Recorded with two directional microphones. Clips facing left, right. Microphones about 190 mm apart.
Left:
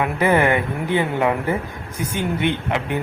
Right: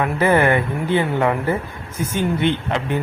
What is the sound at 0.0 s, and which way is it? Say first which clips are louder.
A man's voice: right 1 dB; 15° left (ahead or behind).